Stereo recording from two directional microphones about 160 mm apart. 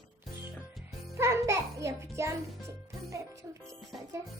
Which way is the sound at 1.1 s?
20° right (ahead or behind).